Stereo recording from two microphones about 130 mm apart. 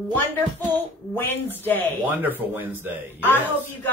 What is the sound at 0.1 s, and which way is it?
A man's voice, 15° left (ahead or behind).